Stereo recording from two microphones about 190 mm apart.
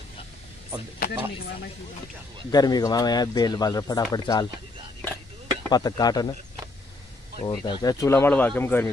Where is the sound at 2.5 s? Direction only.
20° left (ahead or behind).